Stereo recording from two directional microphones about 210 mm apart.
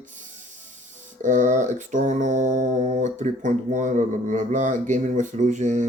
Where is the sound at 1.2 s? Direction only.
35° right (ahead or behind).